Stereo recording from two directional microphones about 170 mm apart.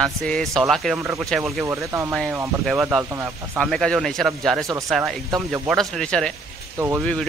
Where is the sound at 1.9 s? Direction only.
15° right (ahead or behind).